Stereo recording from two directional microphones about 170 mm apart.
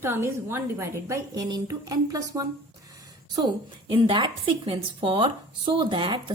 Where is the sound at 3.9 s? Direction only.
30° right (ahead or behind).